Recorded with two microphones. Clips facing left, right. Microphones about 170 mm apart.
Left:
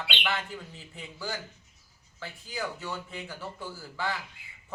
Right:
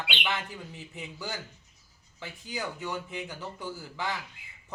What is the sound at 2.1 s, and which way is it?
Speech, 20° right (ahead or behind).